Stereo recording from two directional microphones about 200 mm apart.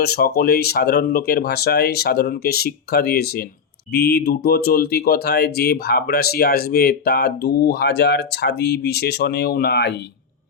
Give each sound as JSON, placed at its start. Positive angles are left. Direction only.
{"t": 0.0, "sound": "speech", "side_deg": 50}